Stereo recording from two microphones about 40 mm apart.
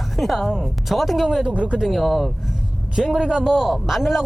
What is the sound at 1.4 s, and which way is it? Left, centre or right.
Speech, right.